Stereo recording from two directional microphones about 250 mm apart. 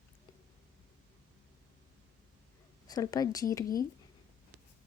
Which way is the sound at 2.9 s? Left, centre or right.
Centre.